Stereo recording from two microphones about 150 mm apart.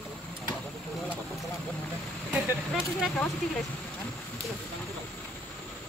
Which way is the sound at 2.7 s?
Centre (ahead or behind).